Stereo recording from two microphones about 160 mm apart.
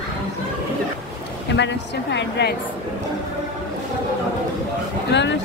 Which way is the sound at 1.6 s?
90° left.